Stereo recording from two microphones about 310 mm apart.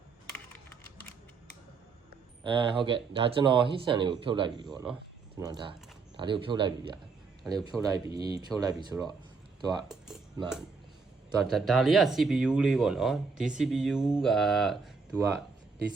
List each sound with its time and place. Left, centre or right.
2.4 s speech: centre
11.4 s speech: centre